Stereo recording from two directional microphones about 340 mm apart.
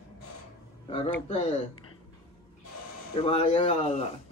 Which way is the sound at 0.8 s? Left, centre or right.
Centre.